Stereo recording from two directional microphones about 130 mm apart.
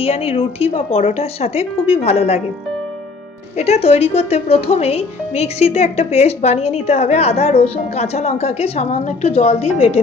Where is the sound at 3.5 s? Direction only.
55° left (ahead or behind).